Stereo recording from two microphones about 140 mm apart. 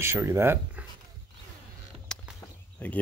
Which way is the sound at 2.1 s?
5° left (ahead or behind).